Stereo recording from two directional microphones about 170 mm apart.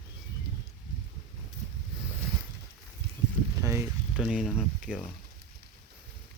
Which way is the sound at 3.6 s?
15° right (ahead or behind).